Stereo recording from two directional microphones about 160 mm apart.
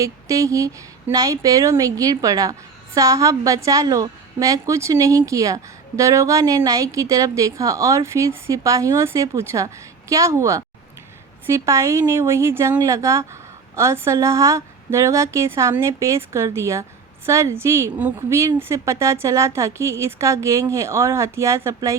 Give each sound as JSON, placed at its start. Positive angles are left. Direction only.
{"t": 0.0, "sound": "a woman's voice", "side_deg": -20}